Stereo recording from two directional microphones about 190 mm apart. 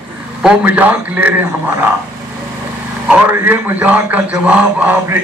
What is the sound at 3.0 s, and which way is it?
A man's voice, 10° right (ahead or behind).